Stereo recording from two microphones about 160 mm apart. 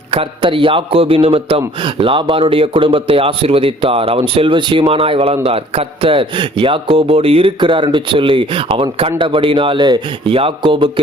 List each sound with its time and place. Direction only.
0.1 s a man's voice: 35° right (ahead or behind)